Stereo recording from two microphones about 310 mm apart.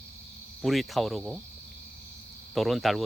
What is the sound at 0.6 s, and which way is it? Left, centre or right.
Speech, centre.